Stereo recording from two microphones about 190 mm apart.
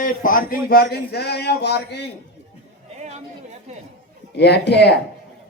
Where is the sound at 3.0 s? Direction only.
35° right (ahead or behind).